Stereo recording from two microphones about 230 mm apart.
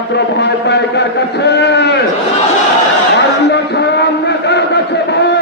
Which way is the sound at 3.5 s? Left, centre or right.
Left.